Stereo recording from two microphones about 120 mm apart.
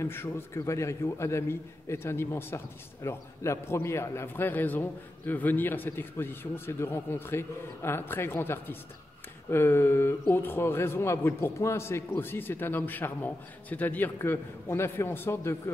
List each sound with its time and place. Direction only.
0.0 s a man's voice: 20° left (ahead or behind)